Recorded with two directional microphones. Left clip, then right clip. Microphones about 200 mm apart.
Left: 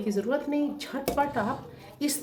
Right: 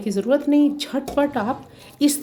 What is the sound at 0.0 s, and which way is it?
Speech, 55° right (ahead or behind).